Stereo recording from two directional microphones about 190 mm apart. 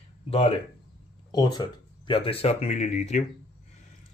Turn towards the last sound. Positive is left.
turn(degrees=40)  # may be behind; listen again after turning